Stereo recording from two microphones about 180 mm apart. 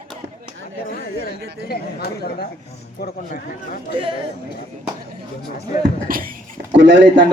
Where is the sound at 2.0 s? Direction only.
60° left (ahead or behind).